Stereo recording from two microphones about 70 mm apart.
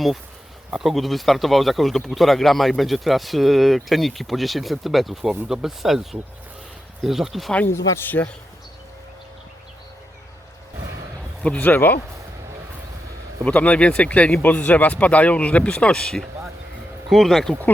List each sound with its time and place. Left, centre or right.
0.7 s speech: centre
7.7 s speech: left
8.0 s speech: left
11.4 s speech: left
13.4 s speech: centre